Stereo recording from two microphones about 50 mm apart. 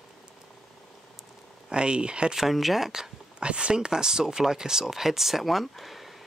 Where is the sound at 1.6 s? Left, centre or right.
Centre.